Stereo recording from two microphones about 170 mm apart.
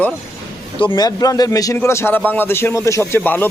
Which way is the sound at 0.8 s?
25° left (ahead or behind).